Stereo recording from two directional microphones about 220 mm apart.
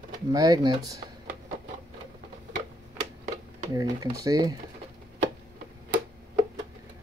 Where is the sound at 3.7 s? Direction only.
15° right (ahead or behind).